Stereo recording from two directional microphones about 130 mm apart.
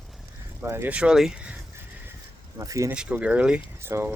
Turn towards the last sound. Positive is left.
turn(degrees=-20)  # may be behind; listen again after turning